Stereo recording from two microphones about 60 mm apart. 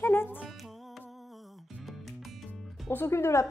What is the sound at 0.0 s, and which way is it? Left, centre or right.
Music, left.